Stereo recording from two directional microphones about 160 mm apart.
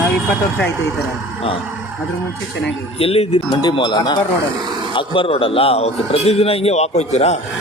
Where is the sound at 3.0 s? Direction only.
35° left (ahead or behind).